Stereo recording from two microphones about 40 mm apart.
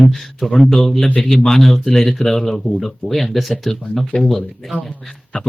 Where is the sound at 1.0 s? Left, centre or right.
Left.